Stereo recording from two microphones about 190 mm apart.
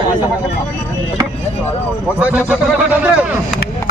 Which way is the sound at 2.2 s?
5° right (ahead or behind).